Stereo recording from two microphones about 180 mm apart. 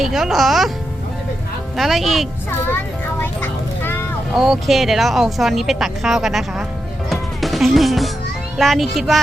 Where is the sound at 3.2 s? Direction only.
10° left (ahead or behind).